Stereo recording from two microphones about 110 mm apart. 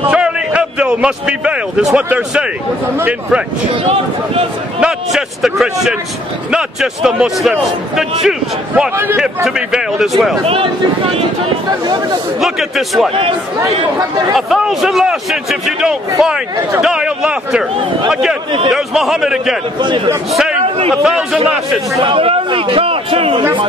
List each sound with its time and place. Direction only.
0.1 s a man's voice: 10° right (ahead or behind)
4.7 s a man's voice: 5° right (ahead or behind)
8.9 s speech: 20° right (ahead or behind)
9.2 s a man's voice: 5° right (ahead or behind)
10.4 s a man's voice: 55° right (ahead or behind)
11.8 s speech: 40° right (ahead or behind)
12.4 s a man's voice: centre (ahead or behind)
14.3 s a man's voice: centre (ahead or behind)
22.0 s a man's voice: 55° right (ahead or behind)